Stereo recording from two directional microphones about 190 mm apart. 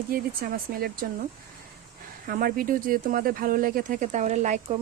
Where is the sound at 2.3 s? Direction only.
50° right (ahead or behind).